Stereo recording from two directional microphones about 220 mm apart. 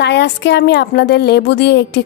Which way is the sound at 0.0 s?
50° left (ahead or behind).